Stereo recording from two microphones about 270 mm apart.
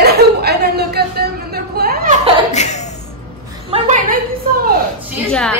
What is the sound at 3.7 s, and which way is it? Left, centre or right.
Speech, right.